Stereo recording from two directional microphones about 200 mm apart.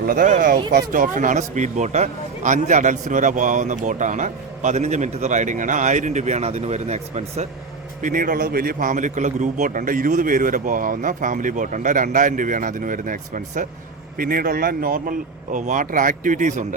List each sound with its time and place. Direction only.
0.1 s speech: 40° right (ahead or behind)